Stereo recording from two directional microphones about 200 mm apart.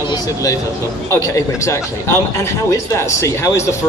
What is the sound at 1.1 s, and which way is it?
Speech, 15° left (ahead or behind).